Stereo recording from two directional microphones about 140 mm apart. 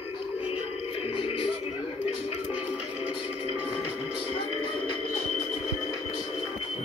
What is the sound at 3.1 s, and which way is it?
Music, 45° left (ahead or behind).